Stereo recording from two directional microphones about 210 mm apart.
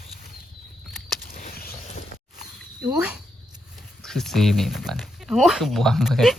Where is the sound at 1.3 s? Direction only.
45° left (ahead or behind).